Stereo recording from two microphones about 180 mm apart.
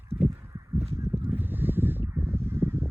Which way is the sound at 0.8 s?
35° right (ahead or behind).